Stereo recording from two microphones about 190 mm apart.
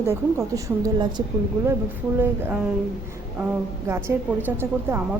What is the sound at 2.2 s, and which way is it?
Speech, 10° right (ahead or behind).